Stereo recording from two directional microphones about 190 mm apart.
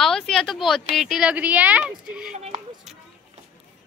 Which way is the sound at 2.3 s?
40° right (ahead or behind).